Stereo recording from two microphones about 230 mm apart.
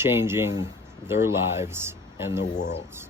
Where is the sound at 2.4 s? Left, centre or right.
Left.